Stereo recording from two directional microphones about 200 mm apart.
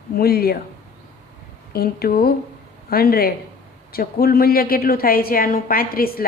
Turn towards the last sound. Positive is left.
turn(degrees=50)  # may be behind; listen again after turning